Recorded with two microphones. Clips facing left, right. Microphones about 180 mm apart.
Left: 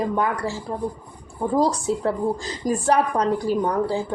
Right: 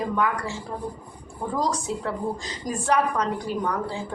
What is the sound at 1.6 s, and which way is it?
A woman's voice, 35° left (ahead or behind).